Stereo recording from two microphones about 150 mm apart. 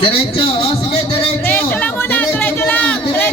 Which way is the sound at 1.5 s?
10° left (ahead or behind).